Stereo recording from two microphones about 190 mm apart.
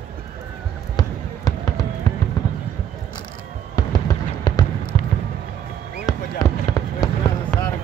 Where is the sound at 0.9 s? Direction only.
20° left (ahead or behind).